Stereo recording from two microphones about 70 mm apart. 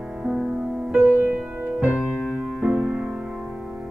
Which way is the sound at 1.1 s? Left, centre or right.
Right.